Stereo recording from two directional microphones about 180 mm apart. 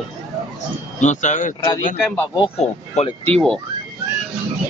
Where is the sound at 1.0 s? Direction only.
45° left (ahead or behind).